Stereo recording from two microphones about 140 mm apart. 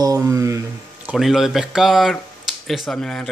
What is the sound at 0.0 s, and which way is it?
Speech, 25° right (ahead or behind).